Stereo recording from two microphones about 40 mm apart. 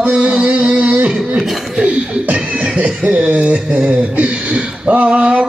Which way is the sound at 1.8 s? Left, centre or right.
Right.